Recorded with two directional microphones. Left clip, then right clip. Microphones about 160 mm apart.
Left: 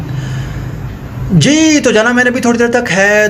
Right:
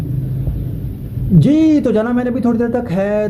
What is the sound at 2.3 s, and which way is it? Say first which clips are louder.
Speech: left 6 dB; 70° left (ahead or behind).